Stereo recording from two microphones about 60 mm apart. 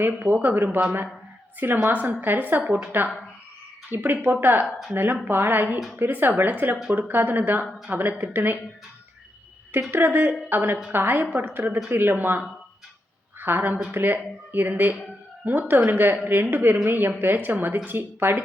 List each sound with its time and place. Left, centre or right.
0.0 s speech: right
4.6 s speech: centre
5.2 s speech: right
9.9 s speech: right
13.4 s a woman's voice: right